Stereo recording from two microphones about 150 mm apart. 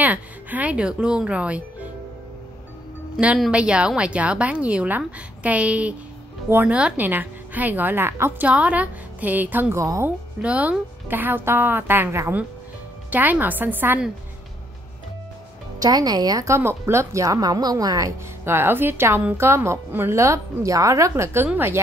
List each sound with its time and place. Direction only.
0.0 s a woman's voice: 10° right (ahead or behind)
3.2 s a woman's voice: 5° right (ahead or behind); by 10.1 s 20° right (ahead or behind)
10.4 s a woman's voice: 10° right (ahead or behind)
15.8 s a woman's voice: 25° right (ahead or behind)